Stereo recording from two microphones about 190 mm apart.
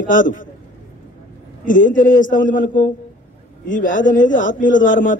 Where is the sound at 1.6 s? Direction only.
45° left (ahead or behind).